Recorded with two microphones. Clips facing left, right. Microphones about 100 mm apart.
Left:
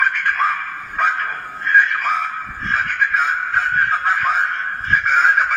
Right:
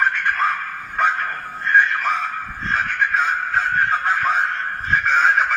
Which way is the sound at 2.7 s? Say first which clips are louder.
Left 1 dB; 15° left (ahead or behind).